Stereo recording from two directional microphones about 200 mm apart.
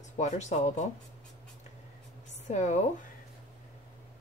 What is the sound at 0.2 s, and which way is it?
Speech, 35° left (ahead or behind).